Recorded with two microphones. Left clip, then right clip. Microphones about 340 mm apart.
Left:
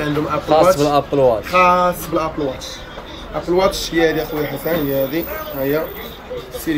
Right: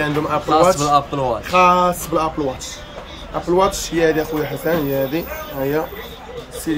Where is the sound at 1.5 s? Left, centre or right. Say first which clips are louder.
Even; right.